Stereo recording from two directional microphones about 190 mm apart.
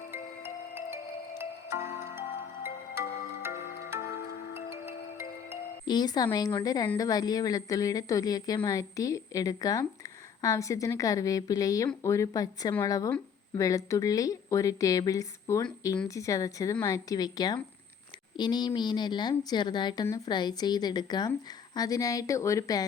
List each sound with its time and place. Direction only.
0.1 s marimba: 10° right (ahead or behind)
4.5 s music: 10° right (ahead or behind)
5.8 s a woman's voice: 20° left (ahead or behind)